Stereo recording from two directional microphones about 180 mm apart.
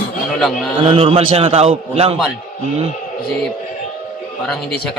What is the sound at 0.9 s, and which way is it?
A man's voice, 30° right (ahead or behind).